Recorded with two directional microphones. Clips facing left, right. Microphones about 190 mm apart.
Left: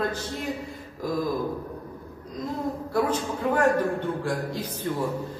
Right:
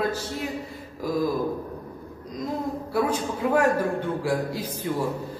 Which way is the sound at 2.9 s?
10° right (ahead or behind).